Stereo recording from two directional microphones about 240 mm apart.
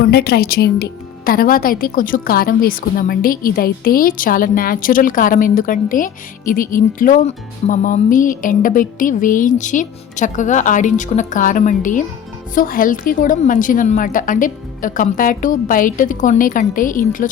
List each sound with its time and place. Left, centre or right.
0.0 s a woman's voice: left